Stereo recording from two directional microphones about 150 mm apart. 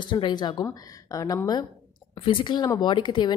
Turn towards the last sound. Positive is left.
turn(degrees=30)  # may be behind; listen again after turning